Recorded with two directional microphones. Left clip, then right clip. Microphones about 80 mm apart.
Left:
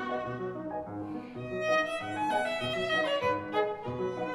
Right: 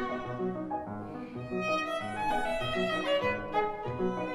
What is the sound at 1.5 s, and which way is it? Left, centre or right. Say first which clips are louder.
Violin: left 2 dB; left.